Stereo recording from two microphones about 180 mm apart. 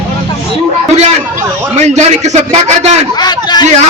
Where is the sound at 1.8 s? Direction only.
40° right (ahead or behind).